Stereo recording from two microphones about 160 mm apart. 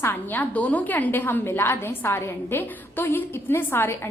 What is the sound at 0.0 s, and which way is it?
A woman's voice, 15° left (ahead or behind).